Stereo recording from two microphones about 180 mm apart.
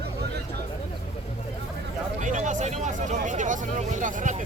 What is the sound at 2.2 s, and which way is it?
Speech, 45° right (ahead or behind).